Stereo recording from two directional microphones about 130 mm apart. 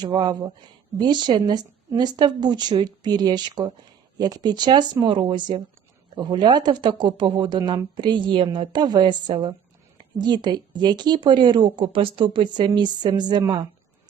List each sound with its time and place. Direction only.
0.0 s speech: 30° right (ahead or behind)